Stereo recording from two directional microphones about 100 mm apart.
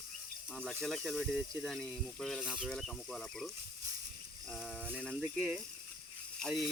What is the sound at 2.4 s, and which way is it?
Speech, 10° right (ahead or behind).